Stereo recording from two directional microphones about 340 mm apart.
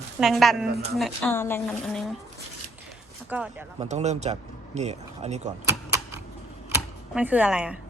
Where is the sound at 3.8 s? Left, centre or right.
Centre.